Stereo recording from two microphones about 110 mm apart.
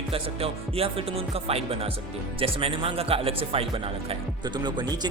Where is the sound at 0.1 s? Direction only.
60° right (ahead or behind).